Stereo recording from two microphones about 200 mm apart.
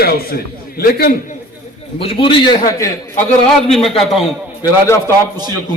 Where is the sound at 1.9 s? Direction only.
25° left (ahead or behind).